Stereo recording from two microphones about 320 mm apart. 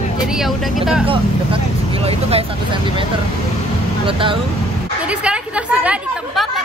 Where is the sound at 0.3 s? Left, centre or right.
Centre.